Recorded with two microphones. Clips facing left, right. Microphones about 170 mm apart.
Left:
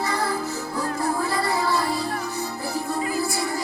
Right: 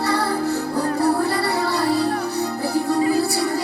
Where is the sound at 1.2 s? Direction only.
65° right (ahead or behind).